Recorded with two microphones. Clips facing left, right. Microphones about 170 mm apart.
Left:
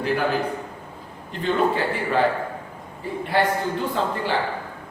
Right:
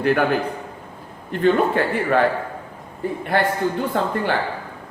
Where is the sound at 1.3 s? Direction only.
55° right (ahead or behind).